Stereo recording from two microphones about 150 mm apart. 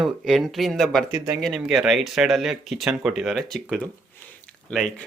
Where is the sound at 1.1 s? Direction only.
25° right (ahead or behind).